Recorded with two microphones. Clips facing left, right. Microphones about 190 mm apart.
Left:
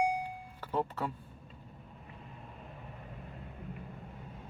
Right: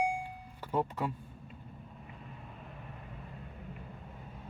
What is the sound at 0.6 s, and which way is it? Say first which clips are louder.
Speech: right 1 dB; 10° right (ahead or behind).